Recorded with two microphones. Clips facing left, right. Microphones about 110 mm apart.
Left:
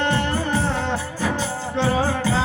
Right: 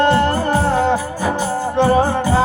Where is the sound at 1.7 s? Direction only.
50° right (ahead or behind).